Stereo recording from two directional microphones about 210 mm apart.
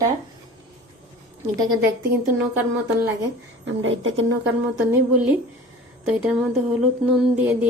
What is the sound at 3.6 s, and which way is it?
Speech, 60° right (ahead or behind).